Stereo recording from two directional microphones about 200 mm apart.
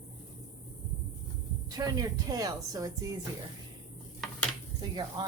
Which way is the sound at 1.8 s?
25° right (ahead or behind).